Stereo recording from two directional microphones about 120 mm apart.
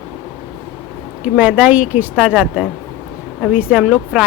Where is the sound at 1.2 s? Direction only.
10° right (ahead or behind).